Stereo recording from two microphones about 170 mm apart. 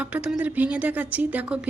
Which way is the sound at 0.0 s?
5° right (ahead or behind).